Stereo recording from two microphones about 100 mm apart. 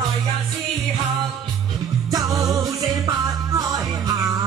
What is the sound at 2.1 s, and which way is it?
Music, 35° right (ahead or behind).